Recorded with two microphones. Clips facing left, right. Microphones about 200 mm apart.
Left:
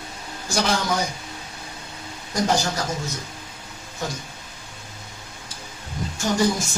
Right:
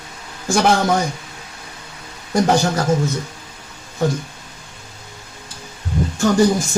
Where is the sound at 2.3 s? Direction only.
60° right (ahead or behind).